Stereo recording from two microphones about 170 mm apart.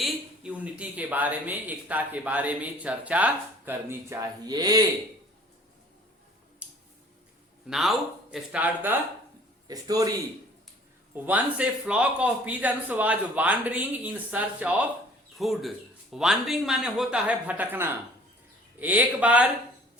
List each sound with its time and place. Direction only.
0.0 s speech: 5° right (ahead or behind); by 4.8 s 25° right (ahead or behind)
6.6 s a sound: 10° right (ahead or behind)
7.7 s speech: centre (ahead or behind)
9.6 s a man's voice: 20° right (ahead or behind)
11.1 s speech: 10° right (ahead or behind)